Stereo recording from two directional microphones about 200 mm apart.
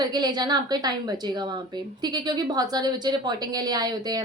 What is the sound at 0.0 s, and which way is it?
A woman's voice, 20° right (ahead or behind).